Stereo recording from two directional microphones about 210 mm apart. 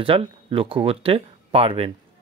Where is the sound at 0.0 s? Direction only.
25° right (ahead or behind).